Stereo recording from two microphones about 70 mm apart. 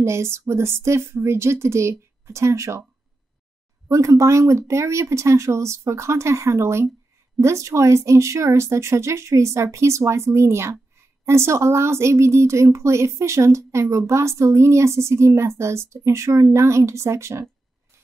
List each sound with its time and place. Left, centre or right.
0.0 s speech: right
3.9 s a woman's voice: right